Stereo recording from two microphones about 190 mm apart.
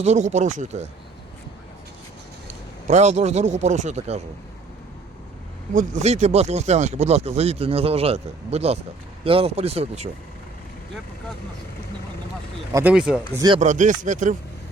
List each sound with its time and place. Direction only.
0.0 s speech: 35° right (ahead or behind)
2.8 s speech: 35° right (ahead or behind)
5.7 s speech: 35° right (ahead or behind)
12.7 s speech: 5° right (ahead or behind)
13.3 s chopping: 20° right (ahead or behind)
13.6 s speech: 40° right (ahead or behind)